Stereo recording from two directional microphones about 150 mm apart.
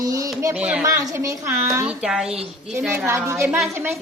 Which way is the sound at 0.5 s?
10° right (ahead or behind).